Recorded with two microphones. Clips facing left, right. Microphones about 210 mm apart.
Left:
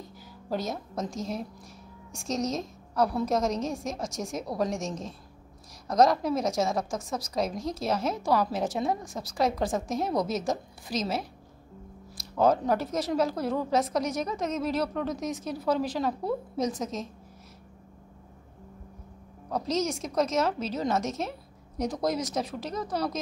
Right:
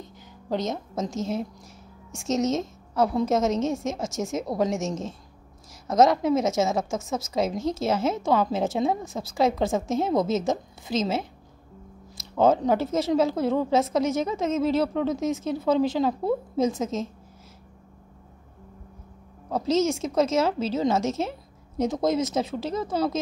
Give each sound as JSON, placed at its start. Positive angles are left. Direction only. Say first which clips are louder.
{"t": 0.5, "sound": "a woman's voice", "louder": "right 4 dB", "side_deg": -20}
{"t": 5.9, "sound": "a woman's voice", "louder": "right 3 dB", "side_deg": -5}
{"t": 6.2, "sound": "a woman's voice", "louder": "right 4 dB", "side_deg": -25}
{"t": 19.5, "sound": "a woman's voice", "louder": "right 6 dB", "side_deg": -25}